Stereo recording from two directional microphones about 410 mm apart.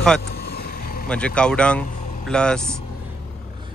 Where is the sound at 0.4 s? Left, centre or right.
Left.